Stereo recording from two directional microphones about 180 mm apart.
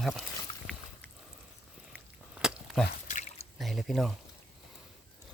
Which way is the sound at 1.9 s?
5° right (ahead or behind).